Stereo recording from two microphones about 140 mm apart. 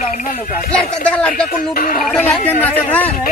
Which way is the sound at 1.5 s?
90° left.